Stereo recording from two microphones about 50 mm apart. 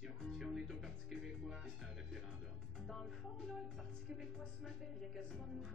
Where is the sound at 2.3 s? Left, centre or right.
Centre.